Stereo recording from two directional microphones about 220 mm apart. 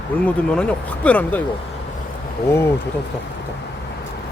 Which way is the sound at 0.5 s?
5° left (ahead or behind).